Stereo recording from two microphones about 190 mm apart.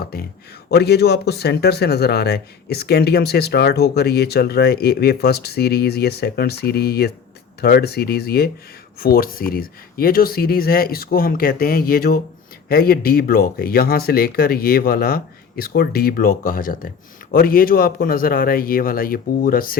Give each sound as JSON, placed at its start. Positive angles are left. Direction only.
{"t": 0.0, "sound": "speech", "side_deg": 55}